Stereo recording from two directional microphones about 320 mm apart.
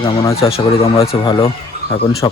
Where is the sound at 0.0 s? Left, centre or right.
Centre.